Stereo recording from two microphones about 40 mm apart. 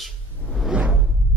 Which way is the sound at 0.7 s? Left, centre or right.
Right.